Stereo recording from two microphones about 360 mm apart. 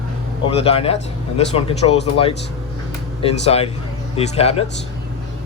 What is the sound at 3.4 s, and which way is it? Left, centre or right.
Speech, centre.